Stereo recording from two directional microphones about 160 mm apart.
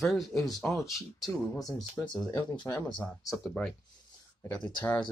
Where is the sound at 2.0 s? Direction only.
5° left (ahead or behind).